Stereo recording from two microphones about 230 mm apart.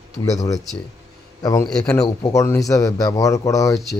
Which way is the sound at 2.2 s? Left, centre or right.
Centre.